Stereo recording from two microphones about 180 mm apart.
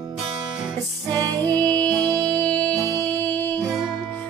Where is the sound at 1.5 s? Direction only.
10° left (ahead or behind).